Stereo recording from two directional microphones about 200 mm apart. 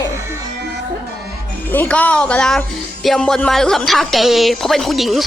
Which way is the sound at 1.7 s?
10° left (ahead or behind).